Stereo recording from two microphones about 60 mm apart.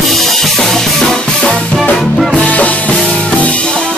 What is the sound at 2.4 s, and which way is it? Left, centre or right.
Music, left.